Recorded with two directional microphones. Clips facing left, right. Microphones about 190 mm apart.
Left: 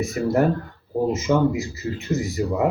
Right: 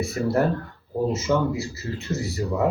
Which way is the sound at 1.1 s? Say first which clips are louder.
Left 4 dB; 15° left (ahead or behind).